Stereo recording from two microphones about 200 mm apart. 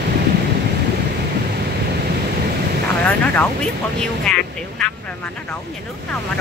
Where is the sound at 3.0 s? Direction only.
5° left (ahead or behind).